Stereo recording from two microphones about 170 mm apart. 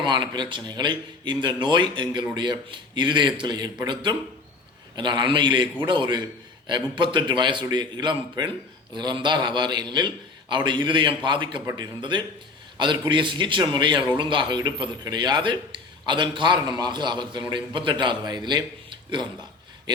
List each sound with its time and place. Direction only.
0.0 s a man's voice: 25° right (ahead or behind)
11.6 s speech: 15° right (ahead or behind)
11.9 s a man's voice: 30° right (ahead or behind)